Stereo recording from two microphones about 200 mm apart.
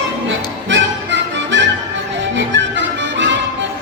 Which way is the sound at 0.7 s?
65° right (ahead or behind).